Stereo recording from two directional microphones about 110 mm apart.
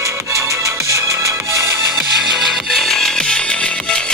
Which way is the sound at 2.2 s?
Centre (ahead or behind).